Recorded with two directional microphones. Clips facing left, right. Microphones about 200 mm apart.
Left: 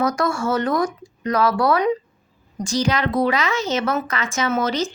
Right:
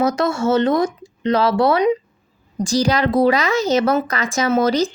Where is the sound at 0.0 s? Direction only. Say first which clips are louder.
Right 3 dB; 25° right (ahead or behind).